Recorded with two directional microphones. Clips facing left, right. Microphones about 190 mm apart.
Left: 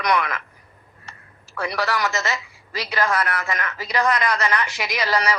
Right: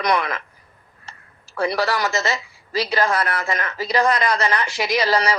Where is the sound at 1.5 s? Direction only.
30° right (ahead or behind).